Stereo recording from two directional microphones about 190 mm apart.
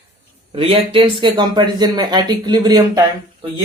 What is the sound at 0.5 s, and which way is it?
Speech, 30° right (ahead or behind).